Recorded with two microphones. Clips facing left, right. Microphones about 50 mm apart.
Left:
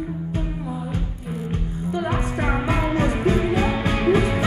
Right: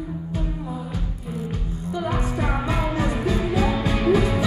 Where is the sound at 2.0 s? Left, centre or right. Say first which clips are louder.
Even; left.